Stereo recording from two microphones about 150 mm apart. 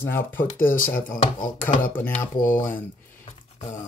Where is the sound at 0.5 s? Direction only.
65° left (ahead or behind).